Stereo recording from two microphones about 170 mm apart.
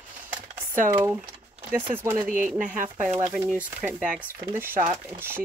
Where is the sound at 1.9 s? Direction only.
15° right (ahead or behind).